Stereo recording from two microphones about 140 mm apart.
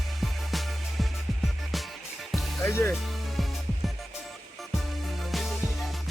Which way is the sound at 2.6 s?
20° left (ahead or behind).